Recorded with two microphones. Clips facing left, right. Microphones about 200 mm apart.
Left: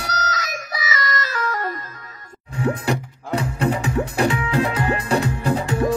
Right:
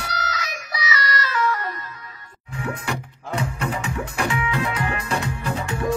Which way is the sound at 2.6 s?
35° left (ahead or behind).